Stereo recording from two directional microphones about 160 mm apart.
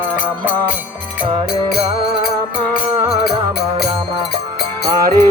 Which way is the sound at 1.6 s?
75° left (ahead or behind).